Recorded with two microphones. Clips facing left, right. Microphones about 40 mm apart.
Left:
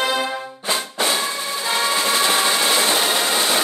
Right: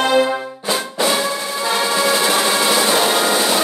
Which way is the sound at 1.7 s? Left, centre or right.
Centre.